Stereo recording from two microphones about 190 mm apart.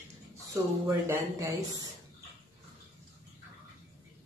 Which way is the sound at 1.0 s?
15° right (ahead or behind).